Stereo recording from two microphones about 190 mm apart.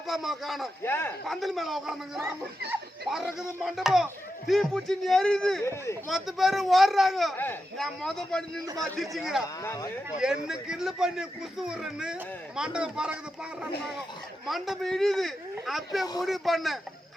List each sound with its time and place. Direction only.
0.1 s speech: centre (ahead or behind)
0.8 s speech: 10° left (ahead or behind)
1.3 s speech: centre (ahead or behind)
5.6 s speech: 15° left (ahead or behind)
6.1 s speech: centre (ahead or behind)
9.6 s speech: 15° left (ahead or behind)
10.2 s speech: 5° right (ahead or behind)
14.4 s speech: centre (ahead or behind)